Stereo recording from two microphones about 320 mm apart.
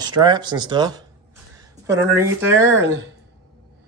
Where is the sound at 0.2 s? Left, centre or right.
Centre.